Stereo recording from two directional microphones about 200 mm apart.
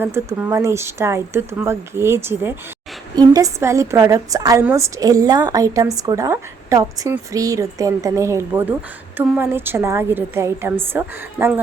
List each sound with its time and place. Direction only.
0.0 s a woman's voice: 10° right (ahead or behind)